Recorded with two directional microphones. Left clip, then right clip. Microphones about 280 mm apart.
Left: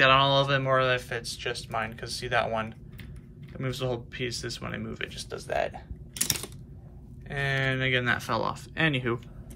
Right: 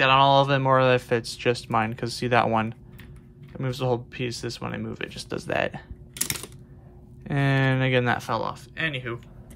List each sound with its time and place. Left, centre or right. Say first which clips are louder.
0.0 s speech: right 3 dB; centre; by 5.9 s right
6.1 s a sound: left 1 dB; centre
7.2 s speech: right 3 dB; centre